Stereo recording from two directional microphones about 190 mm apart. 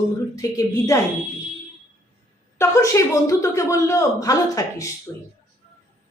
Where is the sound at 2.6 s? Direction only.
15° left (ahead or behind).